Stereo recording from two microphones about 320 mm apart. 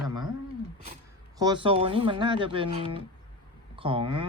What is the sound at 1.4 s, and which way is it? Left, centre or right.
Speech, centre.